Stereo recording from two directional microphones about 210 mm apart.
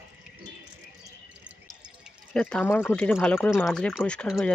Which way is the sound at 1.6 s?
Centre (ahead or behind).